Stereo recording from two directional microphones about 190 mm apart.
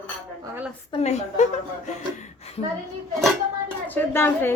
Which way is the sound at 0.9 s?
35° left (ahead or behind).